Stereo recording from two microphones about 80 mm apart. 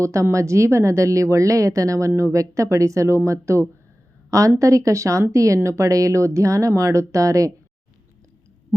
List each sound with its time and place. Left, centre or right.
0.0 s speech: right